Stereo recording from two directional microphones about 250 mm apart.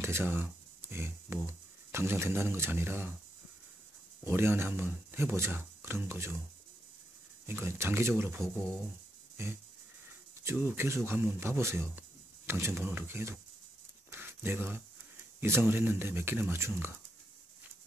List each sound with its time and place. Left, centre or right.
0.0 s a sound: centre
1.9 s speech: centre
4.2 s speech: centre
7.4 s speech: centre
9.4 s music: centre
10.4 s speech: centre
14.1 s a sound: centre
15.4 s speech: centre